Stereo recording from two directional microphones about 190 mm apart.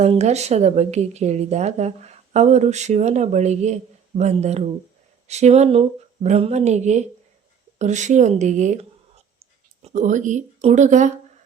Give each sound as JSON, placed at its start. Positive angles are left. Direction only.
{"t": 0.0, "sound": "speech", "side_deg": -35}